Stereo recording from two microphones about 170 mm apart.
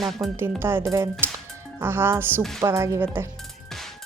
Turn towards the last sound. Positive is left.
turn(degrees=-15)  # may be behind; listen again after turning